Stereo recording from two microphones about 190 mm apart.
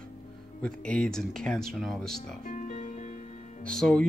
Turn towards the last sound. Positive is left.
turn(degrees=5)  # may be behind; listen again after turning